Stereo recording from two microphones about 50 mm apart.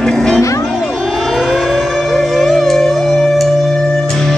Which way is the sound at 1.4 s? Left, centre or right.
Centre.